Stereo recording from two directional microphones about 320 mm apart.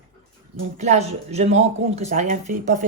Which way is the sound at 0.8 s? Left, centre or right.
Right.